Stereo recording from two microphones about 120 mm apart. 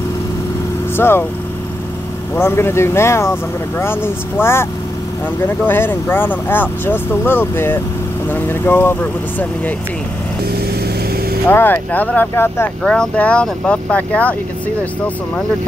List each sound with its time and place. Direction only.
0.9 s speech: 20° left (ahead or behind)
2.3 s speech: 20° left (ahead or behind)
5.7 s speech: 15° left (ahead or behind)
11.4 s speech: 15° left (ahead or behind)